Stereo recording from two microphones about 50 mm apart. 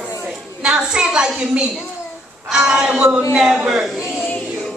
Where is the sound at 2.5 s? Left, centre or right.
Centre.